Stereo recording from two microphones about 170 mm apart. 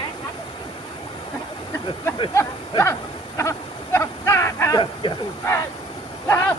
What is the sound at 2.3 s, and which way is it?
Speech, 15° left (ahead or behind).